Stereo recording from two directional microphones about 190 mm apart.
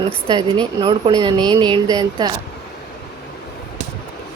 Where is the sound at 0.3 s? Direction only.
20° right (ahead or behind).